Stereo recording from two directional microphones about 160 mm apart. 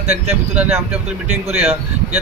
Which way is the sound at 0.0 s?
45° right (ahead or behind).